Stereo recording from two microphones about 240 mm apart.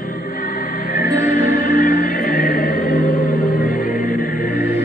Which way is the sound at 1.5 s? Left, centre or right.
Left.